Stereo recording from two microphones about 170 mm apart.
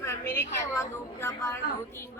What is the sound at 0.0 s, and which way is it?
A woman's voice, 15° left (ahead or behind).